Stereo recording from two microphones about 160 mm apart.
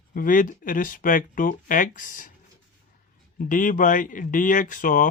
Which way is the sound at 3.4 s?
55° left (ahead or behind).